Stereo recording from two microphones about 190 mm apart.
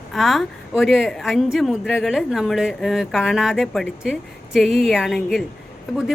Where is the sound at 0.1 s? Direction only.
Centre (ahead or behind).